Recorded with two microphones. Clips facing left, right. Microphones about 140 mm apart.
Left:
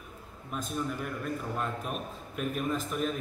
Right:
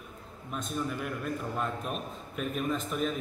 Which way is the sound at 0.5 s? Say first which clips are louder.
Even; centre (ahead or behind).